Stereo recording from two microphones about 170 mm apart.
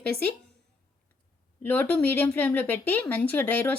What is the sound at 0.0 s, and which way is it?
Speech, 65° right (ahead or behind).